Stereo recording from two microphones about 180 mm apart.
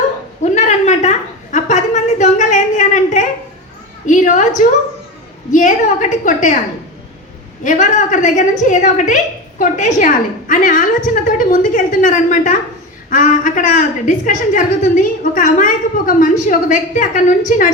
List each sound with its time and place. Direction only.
0.4 s a sound: 40° left (ahead or behind)
4.0 s a woman's voice: 45° left (ahead or behind)
7.6 s a woman's voice: 45° left (ahead or behind)